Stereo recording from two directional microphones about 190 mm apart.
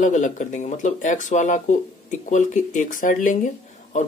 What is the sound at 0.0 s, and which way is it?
Speech, 40° left (ahead or behind).